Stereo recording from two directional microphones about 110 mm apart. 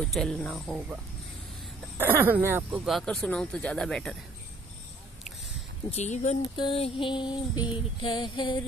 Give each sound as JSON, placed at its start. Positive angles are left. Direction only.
{"t": 0.0, "sound": "speech", "side_deg": 5}
{"t": 2.0, "sound": "speech", "side_deg": -20}
{"t": 2.7, "sound": "speech", "side_deg": -5}
{"t": 5.9, "sound": "speech", "side_deg": 85}
{"t": 6.5, "sound": "female singing", "side_deg": 45}